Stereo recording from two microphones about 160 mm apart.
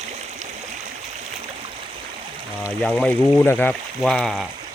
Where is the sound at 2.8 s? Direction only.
5° left (ahead or behind).